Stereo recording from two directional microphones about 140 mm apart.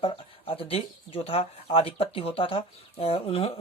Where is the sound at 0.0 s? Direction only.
40° left (ahead or behind).